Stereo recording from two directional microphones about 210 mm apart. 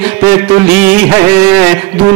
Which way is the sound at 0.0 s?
10° right (ahead or behind).